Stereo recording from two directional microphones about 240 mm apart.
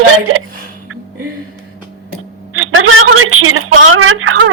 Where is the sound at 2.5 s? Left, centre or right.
Right.